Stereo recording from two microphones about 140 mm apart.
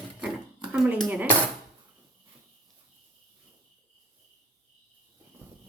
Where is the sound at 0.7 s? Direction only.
5° right (ahead or behind).